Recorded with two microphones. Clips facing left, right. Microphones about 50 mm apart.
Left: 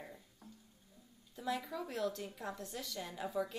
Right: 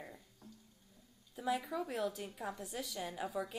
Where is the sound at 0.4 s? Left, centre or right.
Centre.